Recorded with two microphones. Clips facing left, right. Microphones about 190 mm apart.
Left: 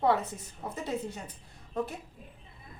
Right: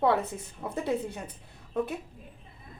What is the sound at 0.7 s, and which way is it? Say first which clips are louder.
Speech: right 5 dB; 60° right (ahead or behind).